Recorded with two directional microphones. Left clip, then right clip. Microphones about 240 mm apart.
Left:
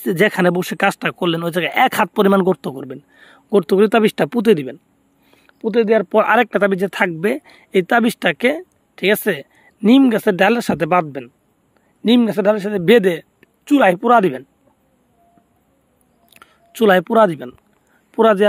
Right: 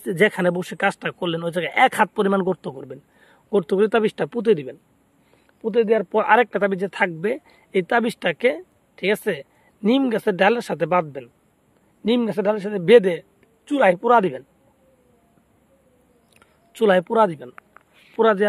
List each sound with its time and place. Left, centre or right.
0.0 s speech: left
16.3 s speech: left